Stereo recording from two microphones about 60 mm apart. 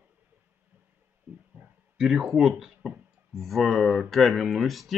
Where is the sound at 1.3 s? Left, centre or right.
Right.